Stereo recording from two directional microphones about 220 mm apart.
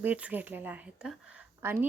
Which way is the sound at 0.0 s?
5° right (ahead or behind).